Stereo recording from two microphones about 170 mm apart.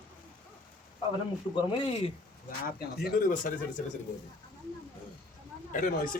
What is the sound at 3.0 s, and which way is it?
Speech, 60° left (ahead or behind).